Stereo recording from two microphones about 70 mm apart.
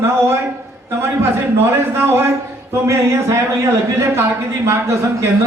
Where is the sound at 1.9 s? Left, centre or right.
Right.